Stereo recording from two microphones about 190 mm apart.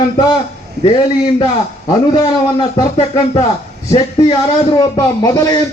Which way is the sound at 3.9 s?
25° left (ahead or behind).